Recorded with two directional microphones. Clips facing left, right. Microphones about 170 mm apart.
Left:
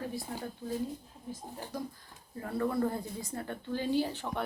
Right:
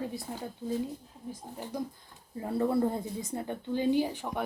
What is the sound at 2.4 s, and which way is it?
Speech, 25° right (ahead or behind).